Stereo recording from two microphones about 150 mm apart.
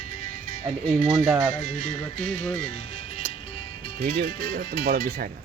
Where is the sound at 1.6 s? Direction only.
55° left (ahead or behind).